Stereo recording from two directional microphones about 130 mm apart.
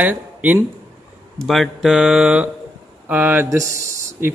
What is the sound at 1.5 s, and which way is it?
Mantra, centre (ahead or behind).